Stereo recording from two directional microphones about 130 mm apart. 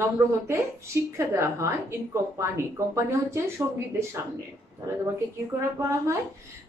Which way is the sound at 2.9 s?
20° right (ahead or behind).